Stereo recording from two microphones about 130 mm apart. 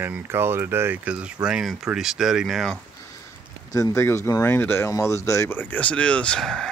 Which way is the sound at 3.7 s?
25° left (ahead or behind).